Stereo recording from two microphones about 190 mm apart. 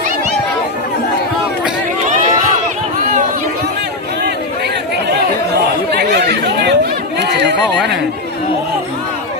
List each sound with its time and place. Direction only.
5.9 s chatter: 60° right (ahead or behind)